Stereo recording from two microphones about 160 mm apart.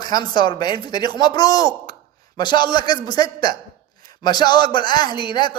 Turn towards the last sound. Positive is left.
turn(degrees=30)  # may be behind; listen again after turning